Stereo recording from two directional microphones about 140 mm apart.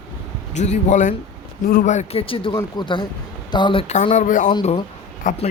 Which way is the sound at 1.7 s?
75° left (ahead or behind).